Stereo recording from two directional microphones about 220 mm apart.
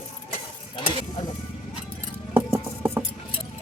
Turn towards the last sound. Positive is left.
turn(degrees=-10)  # may be behind; listen again after turning